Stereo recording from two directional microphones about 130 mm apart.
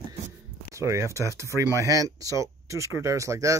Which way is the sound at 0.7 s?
20° right (ahead or behind).